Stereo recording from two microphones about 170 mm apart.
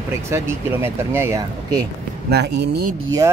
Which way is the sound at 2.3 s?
75° right (ahead or behind).